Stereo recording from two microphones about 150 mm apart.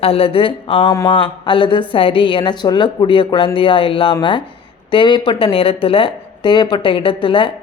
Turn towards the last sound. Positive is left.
turn(degrees=35)  # may be behind; listen again after turning